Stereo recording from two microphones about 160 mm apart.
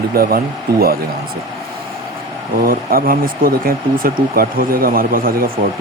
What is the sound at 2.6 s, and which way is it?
Speech, 65° right (ahead or behind).